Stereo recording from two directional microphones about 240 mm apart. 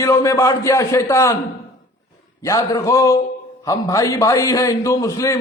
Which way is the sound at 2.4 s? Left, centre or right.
Centre.